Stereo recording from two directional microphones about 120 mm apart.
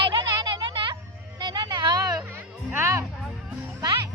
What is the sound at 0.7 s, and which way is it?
Music, 45° right (ahead or behind).